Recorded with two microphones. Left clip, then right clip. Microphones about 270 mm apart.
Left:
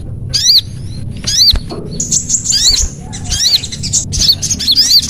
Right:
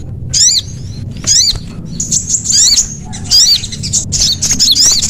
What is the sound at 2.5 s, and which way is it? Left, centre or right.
Bird, left.